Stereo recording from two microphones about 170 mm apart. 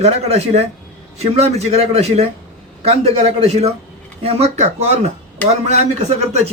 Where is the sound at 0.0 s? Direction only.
40° right (ahead or behind).